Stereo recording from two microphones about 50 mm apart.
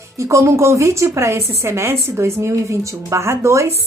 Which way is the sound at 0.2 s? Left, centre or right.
Right.